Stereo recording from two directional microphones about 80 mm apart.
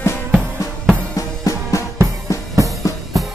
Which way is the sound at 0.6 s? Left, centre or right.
Left.